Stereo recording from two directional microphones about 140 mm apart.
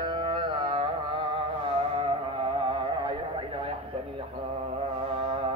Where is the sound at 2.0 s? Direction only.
40° right (ahead or behind).